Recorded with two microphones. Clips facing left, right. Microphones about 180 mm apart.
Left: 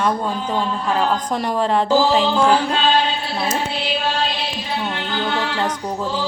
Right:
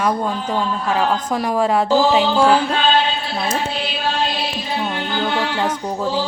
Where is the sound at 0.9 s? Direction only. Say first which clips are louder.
Right 1 dB; 5° right (ahead or behind).